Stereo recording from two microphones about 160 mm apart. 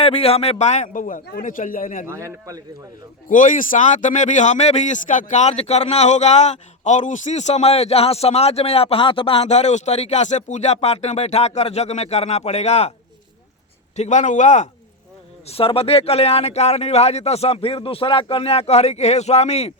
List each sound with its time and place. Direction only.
0.0 s a man's voice: 40° left (ahead or behind); by 2.0 s 55° left (ahead or behind)
2.0 s speech: 20° right (ahead or behind)
3.2 s a man's voice: 55° left (ahead or behind)
13.9 s a man's voice: 45° left (ahead or behind)
15.4 s speech: 35° left (ahead or behind)